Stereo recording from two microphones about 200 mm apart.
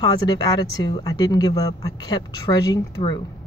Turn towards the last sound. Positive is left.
turn(degrees=20)  # may be behind; listen again after turning